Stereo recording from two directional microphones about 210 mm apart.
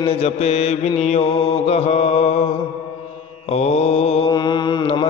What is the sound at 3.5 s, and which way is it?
Mantra, 30° left (ahead or behind).